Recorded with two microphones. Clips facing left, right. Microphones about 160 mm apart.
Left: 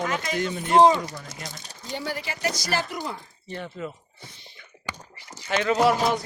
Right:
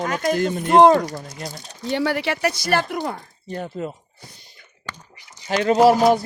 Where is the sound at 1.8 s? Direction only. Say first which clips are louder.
Right 10 dB; 70° right (ahead or behind).